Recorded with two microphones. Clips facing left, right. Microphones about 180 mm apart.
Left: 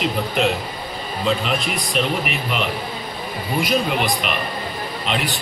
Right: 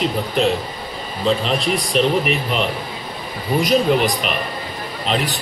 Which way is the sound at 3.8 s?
35° right (ahead or behind).